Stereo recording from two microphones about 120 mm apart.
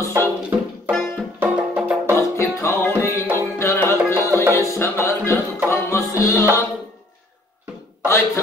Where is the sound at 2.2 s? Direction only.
25° left (ahead or behind).